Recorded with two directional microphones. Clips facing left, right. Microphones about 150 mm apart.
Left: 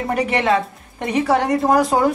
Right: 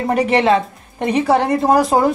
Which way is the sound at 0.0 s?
25° right (ahead or behind).